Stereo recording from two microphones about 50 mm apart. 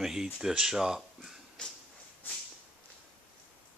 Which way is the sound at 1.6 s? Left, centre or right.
Centre.